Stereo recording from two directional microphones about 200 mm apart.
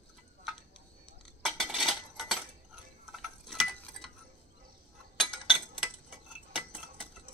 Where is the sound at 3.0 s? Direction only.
Centre (ahead or behind).